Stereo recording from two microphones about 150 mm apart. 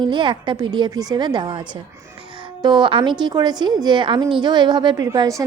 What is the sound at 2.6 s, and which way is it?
A woman's voice, 30° right (ahead or behind).